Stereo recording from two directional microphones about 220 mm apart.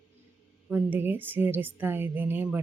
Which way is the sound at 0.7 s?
10° right (ahead or behind).